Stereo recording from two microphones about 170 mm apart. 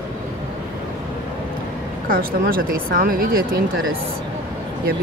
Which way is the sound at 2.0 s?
55° right (ahead or behind).